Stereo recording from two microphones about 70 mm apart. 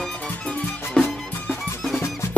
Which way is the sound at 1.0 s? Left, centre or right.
Centre.